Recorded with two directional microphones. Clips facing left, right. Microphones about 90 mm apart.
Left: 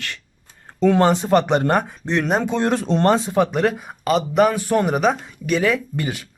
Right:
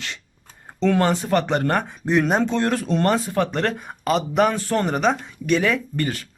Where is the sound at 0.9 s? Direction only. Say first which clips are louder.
Left 4 dB; 20° left (ahead or behind).